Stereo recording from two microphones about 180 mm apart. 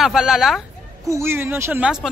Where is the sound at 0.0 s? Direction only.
Centre (ahead or behind).